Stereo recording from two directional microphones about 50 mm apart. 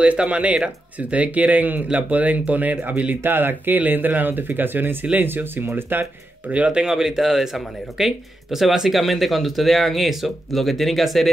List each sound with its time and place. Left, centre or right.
0.0 s speech: right
3.2 s speech: right
6.7 s speech: centre